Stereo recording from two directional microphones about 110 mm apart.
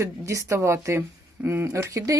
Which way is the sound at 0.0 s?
30° right (ahead or behind).